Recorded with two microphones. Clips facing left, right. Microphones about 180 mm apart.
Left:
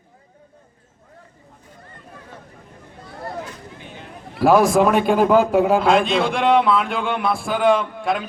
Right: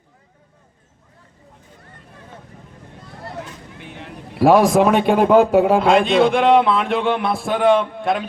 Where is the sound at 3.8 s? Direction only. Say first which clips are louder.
Right 2 dB; 70° right (ahead or behind).